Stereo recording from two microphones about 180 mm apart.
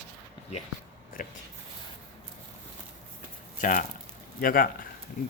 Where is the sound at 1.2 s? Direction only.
50° left (ahead or behind).